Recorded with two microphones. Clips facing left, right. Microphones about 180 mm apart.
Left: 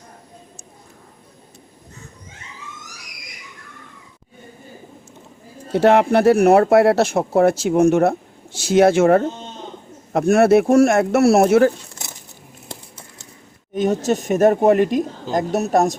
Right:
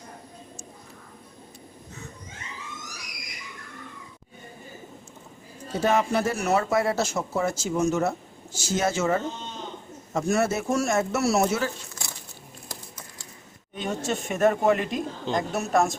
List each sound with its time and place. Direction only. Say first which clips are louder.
5.7 s speech: left 9 dB; 70° left (ahead or behind)
12.6 s crumpling: left 5 dB; 25° left (ahead or behind)
13.7 s speech: left 10 dB; 40° left (ahead or behind)